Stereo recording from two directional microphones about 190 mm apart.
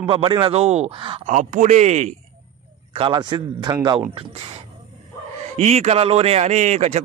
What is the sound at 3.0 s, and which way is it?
A man's voice, 25° right (ahead or behind).